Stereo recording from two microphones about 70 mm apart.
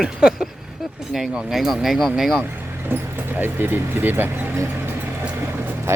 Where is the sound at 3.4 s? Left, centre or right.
Right.